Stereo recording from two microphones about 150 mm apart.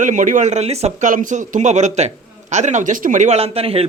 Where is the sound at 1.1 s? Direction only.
60° right (ahead or behind).